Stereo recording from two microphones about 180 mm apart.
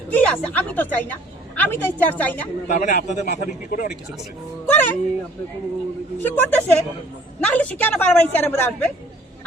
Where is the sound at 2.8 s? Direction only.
40° left (ahead or behind).